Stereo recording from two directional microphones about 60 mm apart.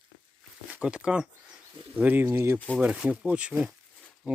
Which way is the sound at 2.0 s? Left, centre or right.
Right.